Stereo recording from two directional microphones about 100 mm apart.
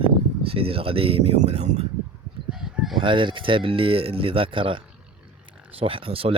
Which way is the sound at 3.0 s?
55° right (ahead or behind).